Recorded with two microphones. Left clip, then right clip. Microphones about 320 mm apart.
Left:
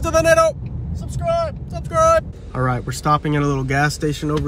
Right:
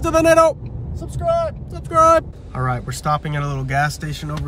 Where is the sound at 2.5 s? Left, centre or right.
Centre.